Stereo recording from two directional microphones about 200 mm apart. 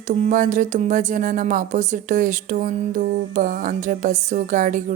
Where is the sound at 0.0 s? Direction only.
35° right (ahead or behind).